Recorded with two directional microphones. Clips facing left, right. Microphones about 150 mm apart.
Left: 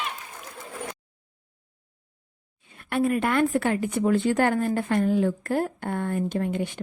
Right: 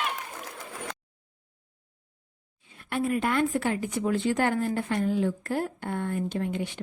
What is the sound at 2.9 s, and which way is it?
Speech, 60° left (ahead or behind).